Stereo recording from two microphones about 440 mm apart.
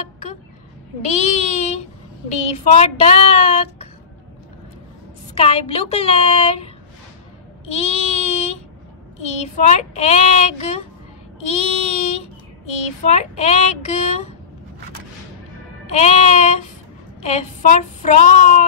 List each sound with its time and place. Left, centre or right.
1.0 s speech: centre
2.6 s child singing: centre
5.3 s child singing: centre
7.6 s a sound: centre
9.3 s child singing: centre
11.3 s a child's voice: centre
15.9 s child singing: centre